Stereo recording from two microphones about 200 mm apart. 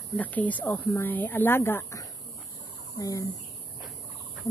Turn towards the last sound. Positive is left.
turn(degrees=15)  # may be behind; listen again after turning